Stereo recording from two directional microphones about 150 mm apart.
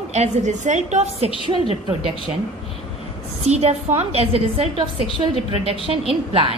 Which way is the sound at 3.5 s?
45° right (ahead or behind).